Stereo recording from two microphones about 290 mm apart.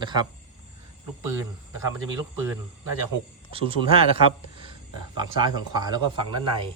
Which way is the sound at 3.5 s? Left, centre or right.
Centre.